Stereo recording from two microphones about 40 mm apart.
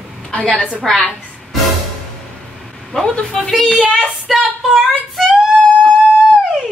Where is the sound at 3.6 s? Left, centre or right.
Right.